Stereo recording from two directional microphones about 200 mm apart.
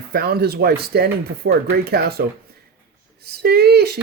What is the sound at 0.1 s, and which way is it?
Speech, 50° right (ahead or behind).